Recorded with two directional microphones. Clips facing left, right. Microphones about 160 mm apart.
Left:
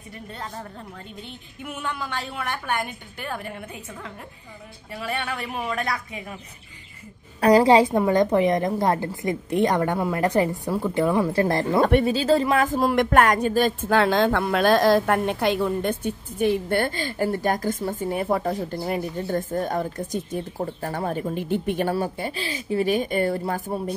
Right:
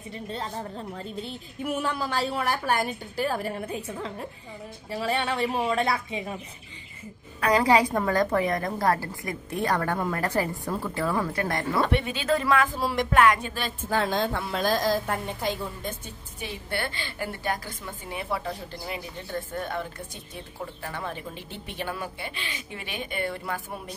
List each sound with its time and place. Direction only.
1.6 s a woman's voice: 35° right (ahead or behind)
7.3 s a woman's voice: 35° left (ahead or behind)
11.8 s speech: 40° left (ahead or behind)
12.6 s a woman's voice: 50° left (ahead or behind)
13.8 s a woman's voice: 75° left (ahead or behind); by 21.9 s 50° left (ahead or behind)
21.9 s speech: 40° left (ahead or behind)